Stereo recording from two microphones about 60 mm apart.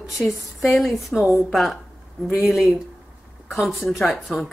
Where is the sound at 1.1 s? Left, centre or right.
Centre.